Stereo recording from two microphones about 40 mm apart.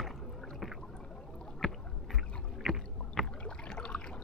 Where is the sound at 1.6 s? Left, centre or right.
Centre.